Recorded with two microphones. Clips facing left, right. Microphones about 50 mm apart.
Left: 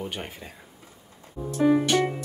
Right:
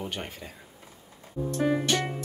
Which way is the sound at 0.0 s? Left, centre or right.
Centre.